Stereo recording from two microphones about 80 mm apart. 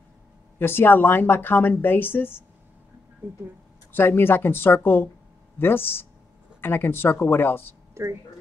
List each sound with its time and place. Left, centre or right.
0.6 s a woman's voice: left
3.9 s a woman's voice: left
7.9 s speech: right